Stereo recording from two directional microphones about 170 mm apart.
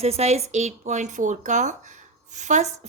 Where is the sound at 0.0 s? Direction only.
40° right (ahead or behind).